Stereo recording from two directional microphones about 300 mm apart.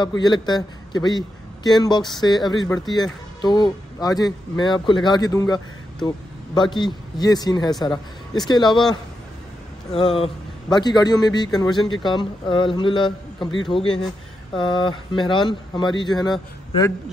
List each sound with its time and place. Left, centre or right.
0.2 s speech: centre
9.9 s speech: centre